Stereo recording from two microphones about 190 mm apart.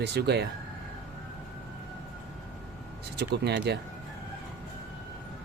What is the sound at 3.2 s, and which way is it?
Speech, 60° right (ahead or behind).